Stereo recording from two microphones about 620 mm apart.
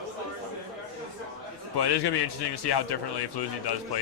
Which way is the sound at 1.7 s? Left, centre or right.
Left.